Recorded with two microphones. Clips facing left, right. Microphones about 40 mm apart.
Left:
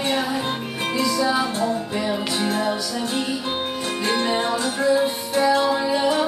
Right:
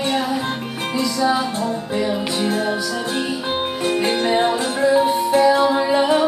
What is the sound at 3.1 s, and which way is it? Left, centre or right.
Music, right.